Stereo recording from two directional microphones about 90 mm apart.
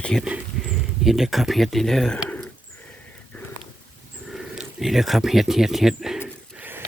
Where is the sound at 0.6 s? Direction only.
5° right (ahead or behind).